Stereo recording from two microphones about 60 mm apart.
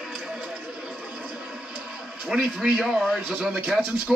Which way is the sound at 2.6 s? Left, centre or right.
Centre.